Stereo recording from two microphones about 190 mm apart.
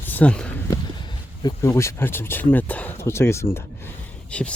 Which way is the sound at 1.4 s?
15° left (ahead or behind).